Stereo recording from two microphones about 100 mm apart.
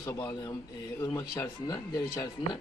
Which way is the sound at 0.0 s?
30° left (ahead or behind).